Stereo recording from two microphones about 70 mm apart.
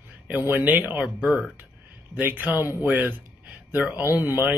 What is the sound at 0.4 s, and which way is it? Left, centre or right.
Speech, right.